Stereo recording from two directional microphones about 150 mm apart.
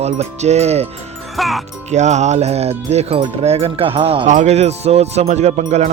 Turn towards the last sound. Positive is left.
turn(degrees=-50)  # may be behind; listen again after turning